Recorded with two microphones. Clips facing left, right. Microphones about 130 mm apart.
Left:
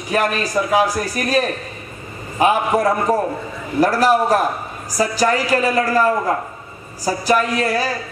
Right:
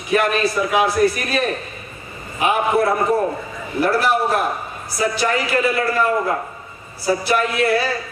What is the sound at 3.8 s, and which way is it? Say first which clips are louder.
A man's voice: left 3 dB; 40° left (ahead or behind).